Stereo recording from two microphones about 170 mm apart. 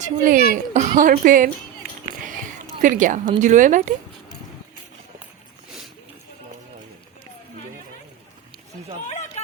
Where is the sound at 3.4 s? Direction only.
45° right (ahead or behind).